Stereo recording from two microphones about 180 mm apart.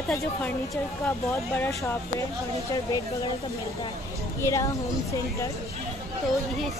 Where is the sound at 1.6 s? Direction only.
15° left (ahead or behind).